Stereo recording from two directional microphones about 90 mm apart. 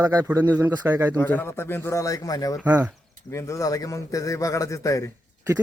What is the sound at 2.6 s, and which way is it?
Speech, 20° right (ahead or behind).